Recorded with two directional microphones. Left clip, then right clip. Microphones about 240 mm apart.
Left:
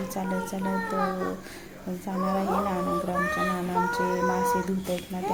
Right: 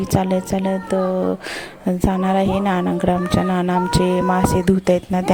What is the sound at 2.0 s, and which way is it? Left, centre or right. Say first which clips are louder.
Speech: right 8 dB; right.